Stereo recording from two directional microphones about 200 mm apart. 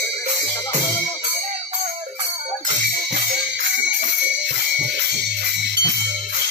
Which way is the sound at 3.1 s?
55° right (ahead or behind).